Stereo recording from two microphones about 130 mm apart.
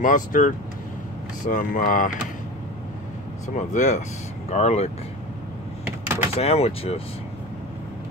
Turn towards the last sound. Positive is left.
turn(degrees=50)  # may be behind; listen again after turning